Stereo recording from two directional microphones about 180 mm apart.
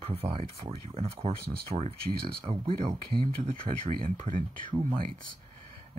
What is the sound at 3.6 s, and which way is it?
Speech, 50° right (ahead or behind).